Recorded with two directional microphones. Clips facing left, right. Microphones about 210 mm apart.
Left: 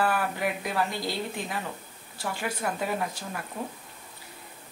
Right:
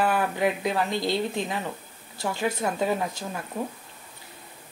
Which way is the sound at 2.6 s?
25° right (ahead or behind).